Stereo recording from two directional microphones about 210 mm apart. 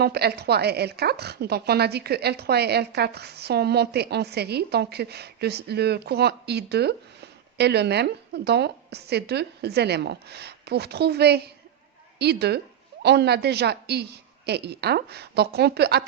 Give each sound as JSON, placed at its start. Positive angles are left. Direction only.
{"t": 0.0, "sound": "a woman's voice", "side_deg": -50}